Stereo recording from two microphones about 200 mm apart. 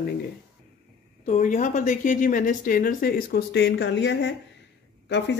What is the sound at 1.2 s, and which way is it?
Speech, 40° left (ahead or behind).